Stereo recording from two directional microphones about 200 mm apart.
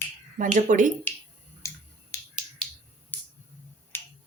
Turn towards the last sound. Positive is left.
turn(degrees=10)  # may be behind; listen again after turning